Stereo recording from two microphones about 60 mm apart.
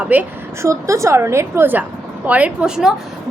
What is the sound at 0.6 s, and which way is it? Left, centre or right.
A woman's voice, right.